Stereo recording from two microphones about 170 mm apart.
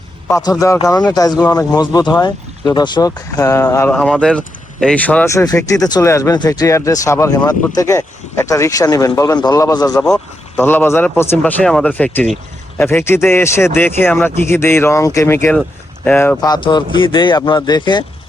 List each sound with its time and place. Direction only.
0.3 s speech: 20° left (ahead or behind)
16.4 s speech: 25° left (ahead or behind)